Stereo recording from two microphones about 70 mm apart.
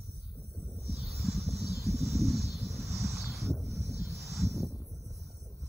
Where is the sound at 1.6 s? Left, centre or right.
Left.